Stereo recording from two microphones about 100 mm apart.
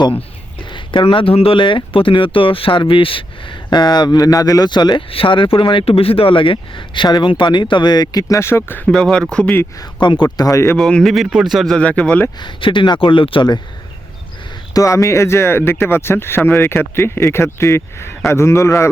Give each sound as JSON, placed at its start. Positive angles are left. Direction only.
{"t": 0.7, "sound": "speech", "side_deg": 55}
{"t": 3.7, "sound": "speech", "side_deg": 45}
{"t": 5.1, "sound": "speech", "side_deg": 60}
{"t": 8.9, "sound": "speech", "side_deg": 5}
{"t": 10.0, "sound": "speech", "side_deg": 50}
{"t": 10.2, "sound": "speech", "side_deg": 40}
{"t": 10.8, "sound": "speech", "side_deg": 5}
{"t": 12.4, "sound": "speech", "side_deg": 55}
{"t": 14.7, "sound": "speech", "side_deg": 35}